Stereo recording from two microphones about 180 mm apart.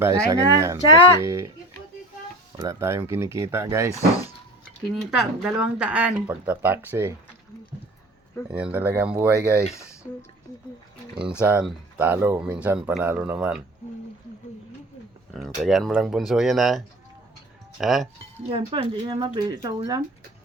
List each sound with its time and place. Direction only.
0.0 s speech: 20° right (ahead or behind)
2.6 s speech: 15° right (ahead or behind)
3.9 s speech: 20° left (ahead or behind)
4.9 s speech: centre (ahead or behind)
8.4 s speech: 5° right (ahead or behind)
9.7 s speech: 15° left (ahead or behind)
11.4 s speech: 10° right (ahead or behind)
15.3 s speech: centre (ahead or behind)
18.5 s speech: 30° right (ahead or behind)